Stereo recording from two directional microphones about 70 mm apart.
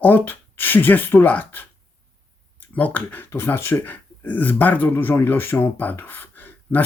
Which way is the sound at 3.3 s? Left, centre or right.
Left.